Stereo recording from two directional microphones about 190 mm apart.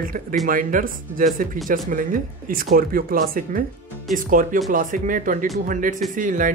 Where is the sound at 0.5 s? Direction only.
45° right (ahead or behind).